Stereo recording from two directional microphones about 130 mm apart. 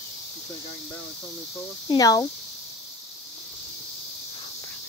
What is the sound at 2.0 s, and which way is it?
Speech, 30° left (ahead or behind).